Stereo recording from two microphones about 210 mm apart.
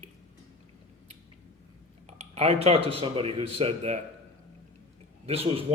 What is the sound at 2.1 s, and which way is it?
A man's voice, 30° right (ahead or behind).